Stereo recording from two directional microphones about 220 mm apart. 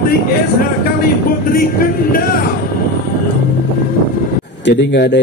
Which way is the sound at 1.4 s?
40° left (ahead or behind).